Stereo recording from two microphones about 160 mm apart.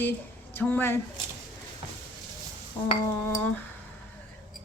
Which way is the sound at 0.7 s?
15° left (ahead or behind).